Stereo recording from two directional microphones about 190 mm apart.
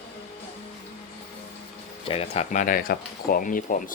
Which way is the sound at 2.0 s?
30° left (ahead or behind).